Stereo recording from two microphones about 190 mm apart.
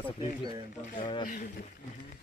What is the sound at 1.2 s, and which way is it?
Speech, 45° left (ahead or behind).